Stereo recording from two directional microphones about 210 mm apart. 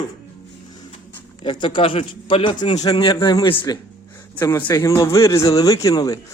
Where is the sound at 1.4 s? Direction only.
25° left (ahead or behind).